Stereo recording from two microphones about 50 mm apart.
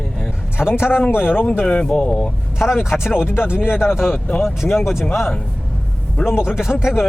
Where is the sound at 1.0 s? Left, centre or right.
Left.